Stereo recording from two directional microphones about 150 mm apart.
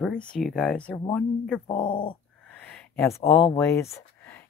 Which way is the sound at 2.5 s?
10° left (ahead or behind).